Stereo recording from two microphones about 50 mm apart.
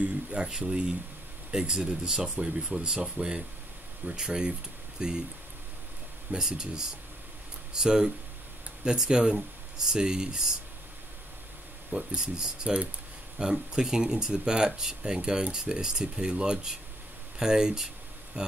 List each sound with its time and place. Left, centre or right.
0.0 s speech: centre
6.3 s speech: centre
11.9 s speech: centre